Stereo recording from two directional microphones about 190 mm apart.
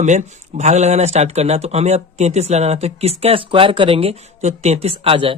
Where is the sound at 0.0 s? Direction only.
40° right (ahead or behind).